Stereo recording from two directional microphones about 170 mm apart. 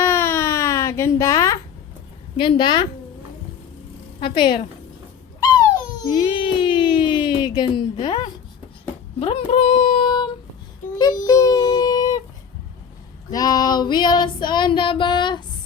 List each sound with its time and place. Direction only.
0.0 s a sound: 15° left (ahead or behind)
2.4 s female singing: 30° left (ahead or behind)
4.2 s female singing: 30° left (ahead or behind)
5.4 s a sound: 20° left (ahead or behind)
10.9 s child singing: 20° left (ahead or behind)
13.3 s female singing: 20° left (ahead or behind)